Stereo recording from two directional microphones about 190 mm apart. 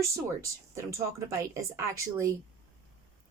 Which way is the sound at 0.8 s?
15° right (ahead or behind).